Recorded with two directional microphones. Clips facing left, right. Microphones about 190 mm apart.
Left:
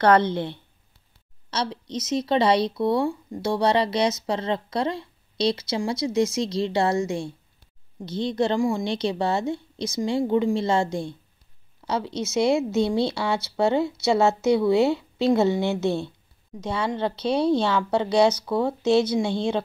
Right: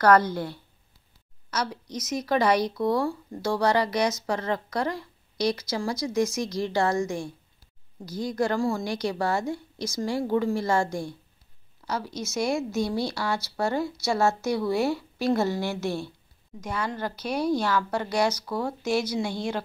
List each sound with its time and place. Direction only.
0.0 s speech: 25° left (ahead or behind)
12.2 s speech: 25° left (ahead or behind)